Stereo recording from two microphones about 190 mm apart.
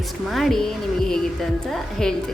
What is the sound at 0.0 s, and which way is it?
A woman's voice, centre (ahead or behind).